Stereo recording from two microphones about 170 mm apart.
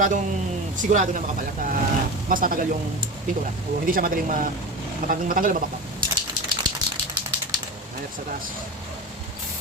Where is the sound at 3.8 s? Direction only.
55° right (ahead or behind).